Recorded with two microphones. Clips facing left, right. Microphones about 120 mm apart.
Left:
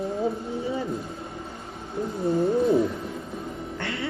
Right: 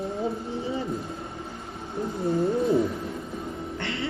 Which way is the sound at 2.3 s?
25° left (ahead or behind).